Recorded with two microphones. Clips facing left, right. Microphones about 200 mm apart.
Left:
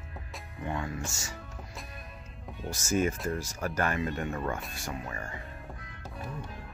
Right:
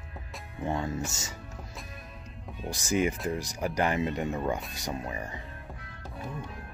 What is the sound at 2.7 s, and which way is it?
Speech, 15° right (ahead or behind).